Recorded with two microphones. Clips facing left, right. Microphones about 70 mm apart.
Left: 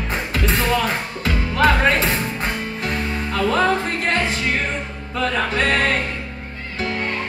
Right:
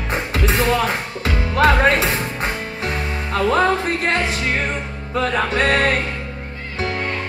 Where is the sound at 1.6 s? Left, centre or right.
Centre.